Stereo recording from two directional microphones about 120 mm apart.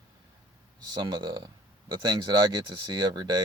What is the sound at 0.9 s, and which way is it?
Speech, 40° right (ahead or behind).